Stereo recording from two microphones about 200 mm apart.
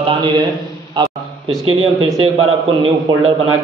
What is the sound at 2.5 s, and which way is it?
Speech, 30° right (ahead or behind).